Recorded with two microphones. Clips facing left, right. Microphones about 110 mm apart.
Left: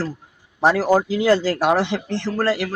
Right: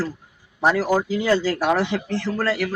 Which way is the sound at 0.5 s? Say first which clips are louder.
Left 3 dB; 35° left (ahead or behind).